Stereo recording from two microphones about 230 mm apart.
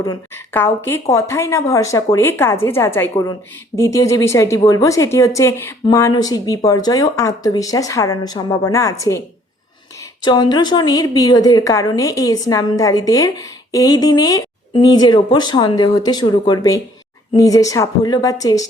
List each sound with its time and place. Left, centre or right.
0.0 s a woman's voice: centre
10.2 s a woman's voice: centre